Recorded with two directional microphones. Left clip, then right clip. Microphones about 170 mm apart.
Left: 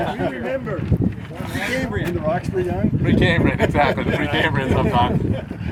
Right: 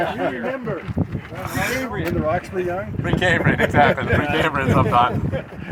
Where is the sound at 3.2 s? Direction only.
55° right (ahead or behind).